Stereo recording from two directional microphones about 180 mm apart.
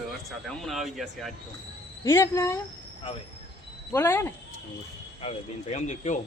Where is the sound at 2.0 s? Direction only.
15° left (ahead or behind).